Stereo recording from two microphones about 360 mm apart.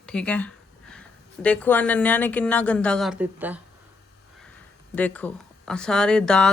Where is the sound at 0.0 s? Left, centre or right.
Centre.